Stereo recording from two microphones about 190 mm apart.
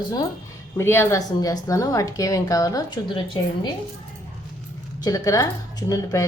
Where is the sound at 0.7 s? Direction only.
10° left (ahead or behind).